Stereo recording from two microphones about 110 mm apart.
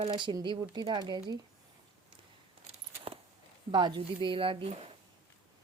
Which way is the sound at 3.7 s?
45° right (ahead or behind).